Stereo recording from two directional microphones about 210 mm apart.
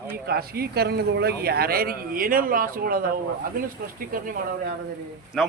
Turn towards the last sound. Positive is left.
turn(degrees=0)  # may be behind; listen again after turning